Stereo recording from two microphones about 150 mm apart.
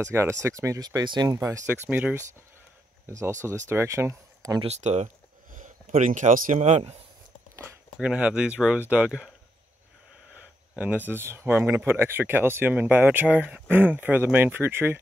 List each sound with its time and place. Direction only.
0.1 s speech: 20° right (ahead or behind)
1.7 s speech: 10° right (ahead or behind)
4.6 s speech: 50° right (ahead or behind)
6.6 s speech: 45° right (ahead or behind)
8.0 s speech: 5° right (ahead or behind)
11.1 s speech: 15° right (ahead or behind)